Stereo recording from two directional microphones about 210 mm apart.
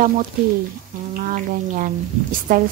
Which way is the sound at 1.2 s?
40° right (ahead or behind).